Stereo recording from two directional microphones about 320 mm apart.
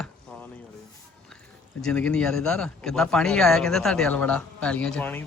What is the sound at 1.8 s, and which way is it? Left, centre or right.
Speech, centre.